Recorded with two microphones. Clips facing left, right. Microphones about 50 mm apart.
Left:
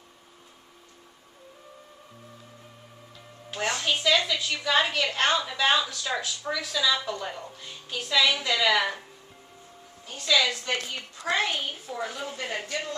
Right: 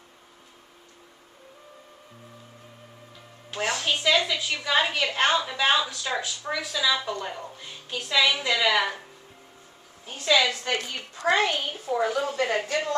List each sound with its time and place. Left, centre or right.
3.4 s music: centre
4.0 s a woman's voice: centre
10.0 s a woman's voice: right
10.6 s speech: right
11.9 s speech: right